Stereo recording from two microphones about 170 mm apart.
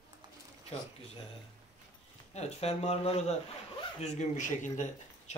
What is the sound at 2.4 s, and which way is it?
Speech, 40° left (ahead or behind).